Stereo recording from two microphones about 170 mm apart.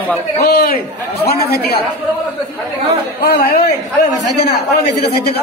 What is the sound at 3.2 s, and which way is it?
A man's voice, 65° left (ahead or behind).